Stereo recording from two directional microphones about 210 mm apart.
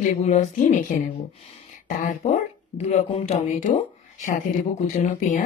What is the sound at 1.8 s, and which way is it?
A woman's voice, 35° left (ahead or behind).